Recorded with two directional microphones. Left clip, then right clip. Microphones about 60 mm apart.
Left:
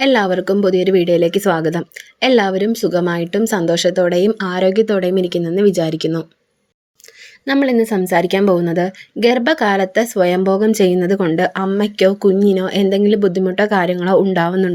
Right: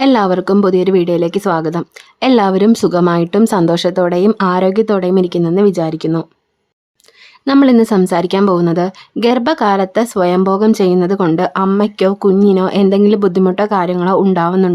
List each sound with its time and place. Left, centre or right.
0.0 s speech: right
2.2 s speech: right
3.1 s speech: right
5.7 s speech: centre
7.4 s a woman's voice: right
7.7 s speech: right
8.0 s speech: right
9.2 s speech: right
12.6 s speech: right
13.1 s speech: right
13.7 s speech: right